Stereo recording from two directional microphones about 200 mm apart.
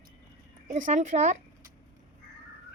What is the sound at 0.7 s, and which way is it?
Speech, 35° right (ahead or behind).